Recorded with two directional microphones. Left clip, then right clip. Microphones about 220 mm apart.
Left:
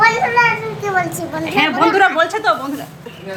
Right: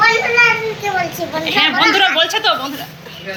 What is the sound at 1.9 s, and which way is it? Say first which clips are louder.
Speech: even; 20° left (ahead or behind).